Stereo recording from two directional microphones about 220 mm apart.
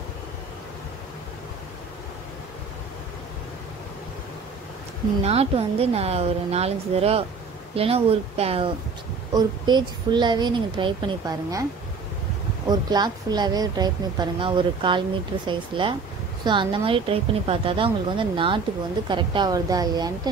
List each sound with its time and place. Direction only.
5.2 s a woman's voice: 25° right (ahead or behind)
12.6 s a woman's voice: 20° right (ahead or behind)